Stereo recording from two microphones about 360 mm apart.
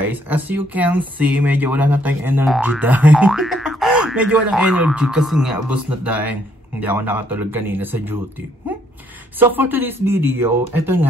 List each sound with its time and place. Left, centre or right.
0.0 s speech: centre
9.4 s speech: centre